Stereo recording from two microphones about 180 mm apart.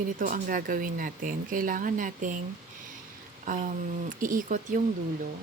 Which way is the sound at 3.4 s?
45° right (ahead or behind).